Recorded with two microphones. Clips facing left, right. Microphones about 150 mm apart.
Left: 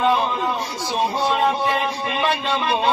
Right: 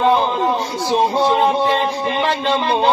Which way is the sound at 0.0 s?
40° right (ahead or behind).